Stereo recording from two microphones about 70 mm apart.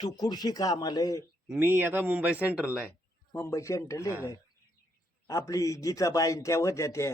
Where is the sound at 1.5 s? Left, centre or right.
Right.